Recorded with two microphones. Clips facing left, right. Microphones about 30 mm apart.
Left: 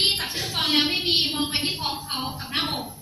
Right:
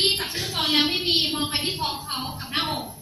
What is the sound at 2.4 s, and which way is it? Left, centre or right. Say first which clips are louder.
Music: right 3 dB; centre.